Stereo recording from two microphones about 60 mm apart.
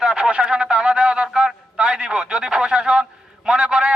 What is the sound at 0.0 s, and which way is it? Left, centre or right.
A man's voice, centre.